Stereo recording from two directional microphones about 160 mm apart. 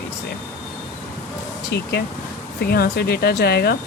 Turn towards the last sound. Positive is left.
turn(degrees=75)  # may be behind; listen again after turning